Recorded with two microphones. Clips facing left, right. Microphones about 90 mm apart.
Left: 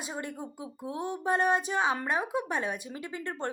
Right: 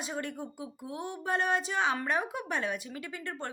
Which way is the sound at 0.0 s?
20° left (ahead or behind).